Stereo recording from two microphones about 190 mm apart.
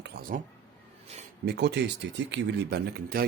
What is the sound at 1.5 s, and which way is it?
Speech, 60° right (ahead or behind).